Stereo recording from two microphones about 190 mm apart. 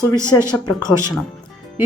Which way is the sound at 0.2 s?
15° right (ahead or behind).